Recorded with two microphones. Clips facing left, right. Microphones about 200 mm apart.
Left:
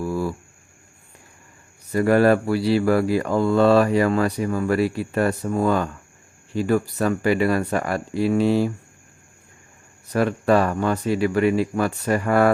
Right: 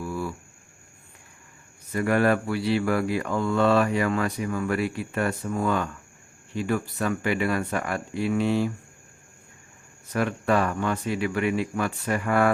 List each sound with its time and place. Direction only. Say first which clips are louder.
0.0 s a sound: left 6 dB; 40° left (ahead or behind)
1.9 s speech: left 6 dB; 35° left (ahead or behind)
10.1 s speech: left 5 dB; 35° left (ahead or behind)